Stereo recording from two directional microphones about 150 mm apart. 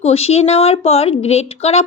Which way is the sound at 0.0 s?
45° left (ahead or behind).